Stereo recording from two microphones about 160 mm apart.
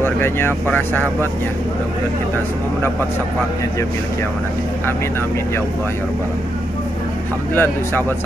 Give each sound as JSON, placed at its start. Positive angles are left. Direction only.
{"t": 0.0, "sound": "speech", "side_deg": 15}
{"t": 7.5, "sound": "speech", "side_deg": 15}